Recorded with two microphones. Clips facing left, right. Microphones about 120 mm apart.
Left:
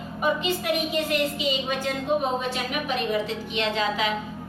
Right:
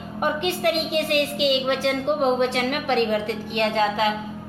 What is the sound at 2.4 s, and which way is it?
A woman's voice, 70° right (ahead or behind).